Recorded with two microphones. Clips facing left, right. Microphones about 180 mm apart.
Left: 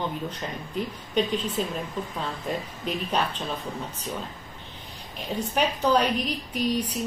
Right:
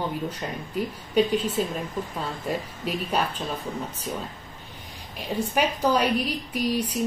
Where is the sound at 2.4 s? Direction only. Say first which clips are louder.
Right 2 dB; 5° right (ahead or behind).